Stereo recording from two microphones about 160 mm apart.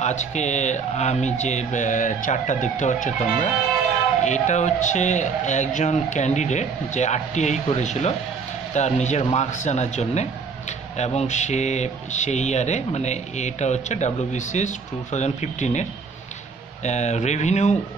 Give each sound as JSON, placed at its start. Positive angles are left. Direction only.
{"t": 0.0, "sound": "speech", "side_deg": 45}